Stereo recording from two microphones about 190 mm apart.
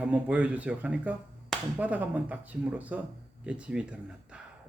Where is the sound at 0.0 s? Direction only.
10° right (ahead or behind).